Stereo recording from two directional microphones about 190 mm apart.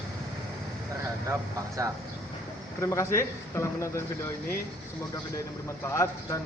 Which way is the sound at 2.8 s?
15° left (ahead or behind).